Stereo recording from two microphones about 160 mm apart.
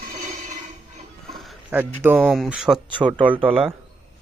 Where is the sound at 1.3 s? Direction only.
Centre (ahead or behind).